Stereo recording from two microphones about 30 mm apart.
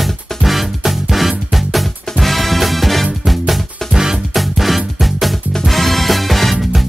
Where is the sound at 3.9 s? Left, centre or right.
Centre.